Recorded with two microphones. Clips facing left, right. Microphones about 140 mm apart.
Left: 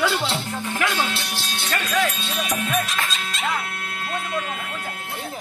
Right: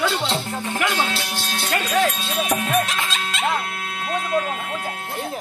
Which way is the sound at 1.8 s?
40° right (ahead or behind).